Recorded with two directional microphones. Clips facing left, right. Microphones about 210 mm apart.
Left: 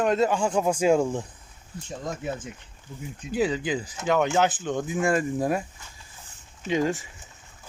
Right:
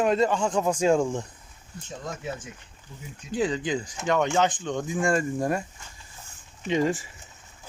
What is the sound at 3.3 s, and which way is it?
Speech, 5° left (ahead or behind).